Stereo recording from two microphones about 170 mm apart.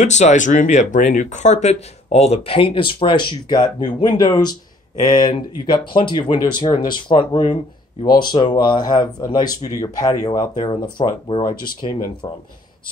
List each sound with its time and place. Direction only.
0.0 s speech: 45° left (ahead or behind); by 12.3 s 25° left (ahead or behind)